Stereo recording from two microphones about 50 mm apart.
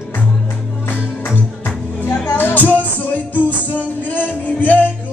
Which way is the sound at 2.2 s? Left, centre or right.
Left.